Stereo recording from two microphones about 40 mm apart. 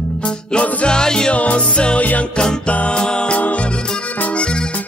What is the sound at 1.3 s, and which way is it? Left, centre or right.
Music, left.